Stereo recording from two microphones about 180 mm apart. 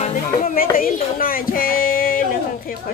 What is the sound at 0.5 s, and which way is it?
Speech, 50° left (ahead or behind).